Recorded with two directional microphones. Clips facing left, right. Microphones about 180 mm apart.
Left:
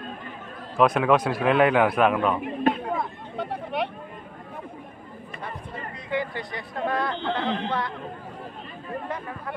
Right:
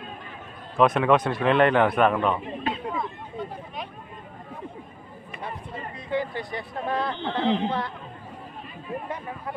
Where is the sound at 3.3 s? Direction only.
75° left (ahead or behind).